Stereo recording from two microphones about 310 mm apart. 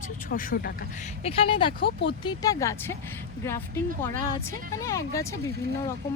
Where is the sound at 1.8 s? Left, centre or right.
Left.